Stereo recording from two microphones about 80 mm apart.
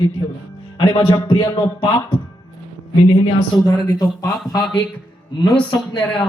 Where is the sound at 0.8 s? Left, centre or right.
Left.